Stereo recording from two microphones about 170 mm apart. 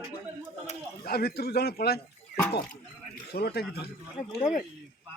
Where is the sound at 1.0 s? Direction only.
65° left (ahead or behind).